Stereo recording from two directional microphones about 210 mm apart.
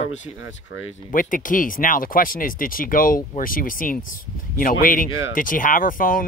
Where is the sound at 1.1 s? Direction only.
40° left (ahead or behind).